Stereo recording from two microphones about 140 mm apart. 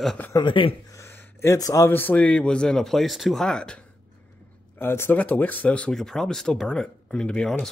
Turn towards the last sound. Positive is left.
turn(degrees=5)  # may be behind; listen again after turning